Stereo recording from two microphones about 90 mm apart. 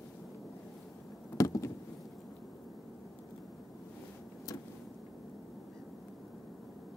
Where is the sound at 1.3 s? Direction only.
40° left (ahead or behind).